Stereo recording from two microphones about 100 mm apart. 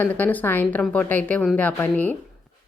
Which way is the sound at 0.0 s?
20° left (ahead or behind).